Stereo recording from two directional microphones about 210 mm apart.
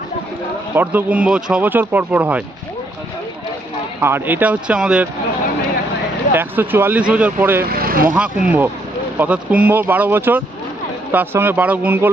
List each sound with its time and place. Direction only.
0.7 s speech: 10° right (ahead or behind)
4.0 s speech: 10° right (ahead or behind)
6.3 s speech: 10° right (ahead or behind)
7.6 s speech: 45° right (ahead or behind)
8.1 s speech: 5° right (ahead or behind)